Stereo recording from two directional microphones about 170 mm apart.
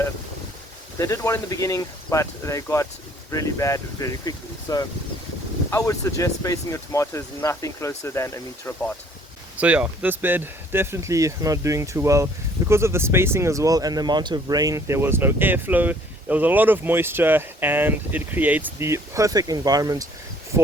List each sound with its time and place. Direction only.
0.9 s speech: 20° left (ahead or behind)
9.6 s speech: 5° right (ahead or behind)